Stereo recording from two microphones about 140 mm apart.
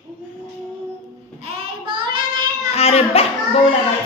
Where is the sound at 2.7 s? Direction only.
45° left (ahead or behind).